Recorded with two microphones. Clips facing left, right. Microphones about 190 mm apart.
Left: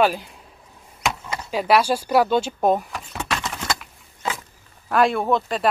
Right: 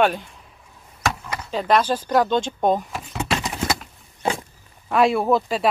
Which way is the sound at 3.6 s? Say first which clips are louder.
Right 3 dB; 30° right (ahead or behind).